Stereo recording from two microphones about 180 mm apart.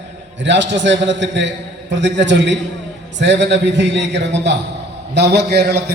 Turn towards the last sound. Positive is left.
turn(degrees=-65)  # may be behind; listen again after turning